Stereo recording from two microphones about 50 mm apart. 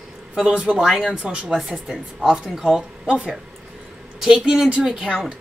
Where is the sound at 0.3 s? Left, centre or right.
Right.